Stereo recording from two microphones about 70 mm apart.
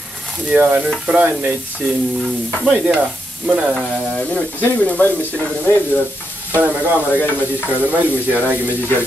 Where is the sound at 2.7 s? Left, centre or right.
Centre.